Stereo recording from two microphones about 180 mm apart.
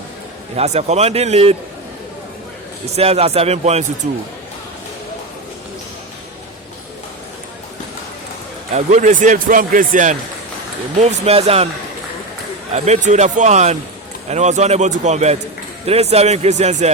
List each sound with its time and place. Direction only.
0.5 s speech: 35° right (ahead or behind)
2.9 s speech: 35° right (ahead or behind)
8.7 s speech: 40° right (ahead or behind)
11.0 s speech: 35° right (ahead or behind)
12.7 s speech: 40° right (ahead or behind)